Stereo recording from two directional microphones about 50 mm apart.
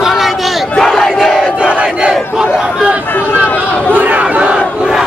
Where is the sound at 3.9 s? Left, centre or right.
Right.